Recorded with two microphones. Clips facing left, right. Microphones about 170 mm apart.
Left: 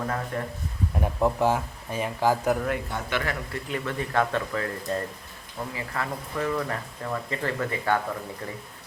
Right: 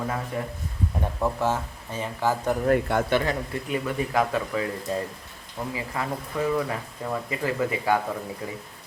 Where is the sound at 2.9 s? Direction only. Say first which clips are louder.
Right 9 dB; 65° right (ahead or behind).